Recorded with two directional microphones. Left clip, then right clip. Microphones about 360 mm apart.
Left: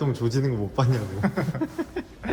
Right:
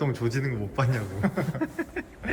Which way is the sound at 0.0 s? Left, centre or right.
Centre.